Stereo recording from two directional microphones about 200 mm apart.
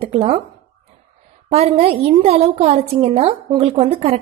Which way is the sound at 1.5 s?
30° right (ahead or behind).